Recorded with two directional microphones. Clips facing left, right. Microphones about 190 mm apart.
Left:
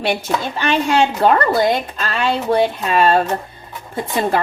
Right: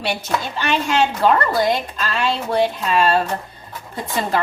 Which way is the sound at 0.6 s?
50° left (ahead or behind).